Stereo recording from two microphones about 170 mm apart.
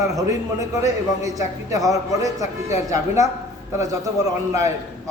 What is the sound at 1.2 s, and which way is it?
Speech, 20° right (ahead or behind).